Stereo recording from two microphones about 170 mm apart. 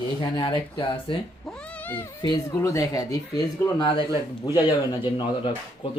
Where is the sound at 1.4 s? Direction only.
5° left (ahead or behind); by 5.5 s 30° left (ahead or behind).